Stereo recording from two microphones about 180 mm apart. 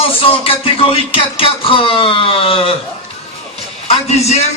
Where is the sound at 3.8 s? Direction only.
35° left (ahead or behind).